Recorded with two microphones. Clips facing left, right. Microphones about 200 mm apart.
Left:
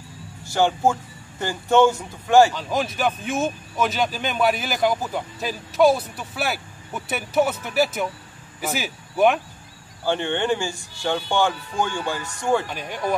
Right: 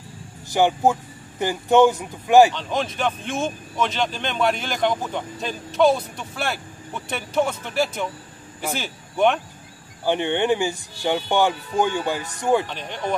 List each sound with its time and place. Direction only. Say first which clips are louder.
0.5 s speech: right 1 dB; 15° right (ahead or behind)
2.5 s speech: left 1 dB; 5° left (ahead or behind)
10.0 s speech: right 2 dB; 15° right (ahead or behind)
12.6 s speech: left 1 dB; 10° left (ahead or behind)